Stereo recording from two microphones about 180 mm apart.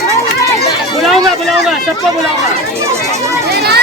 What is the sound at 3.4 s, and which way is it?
Children playing, 60° right (ahead or behind).